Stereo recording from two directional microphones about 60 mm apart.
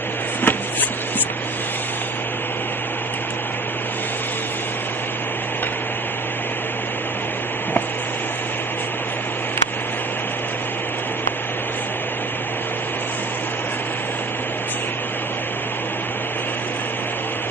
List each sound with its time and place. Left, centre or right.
0.4 s vehicle: left